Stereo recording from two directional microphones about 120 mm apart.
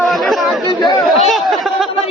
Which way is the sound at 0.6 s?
35° left (ahead or behind).